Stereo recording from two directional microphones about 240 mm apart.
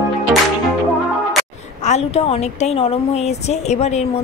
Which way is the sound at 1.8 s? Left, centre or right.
Left.